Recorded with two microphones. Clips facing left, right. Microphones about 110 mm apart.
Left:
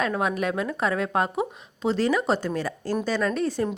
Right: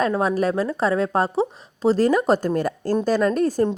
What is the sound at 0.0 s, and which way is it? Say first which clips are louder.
Speech: right 5 dB; 35° right (ahead or behind).